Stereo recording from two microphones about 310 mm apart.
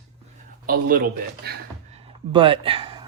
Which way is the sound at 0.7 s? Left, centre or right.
Right.